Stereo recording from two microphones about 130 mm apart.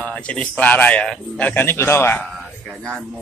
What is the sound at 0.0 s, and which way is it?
A man's voice, 10° left (ahead or behind).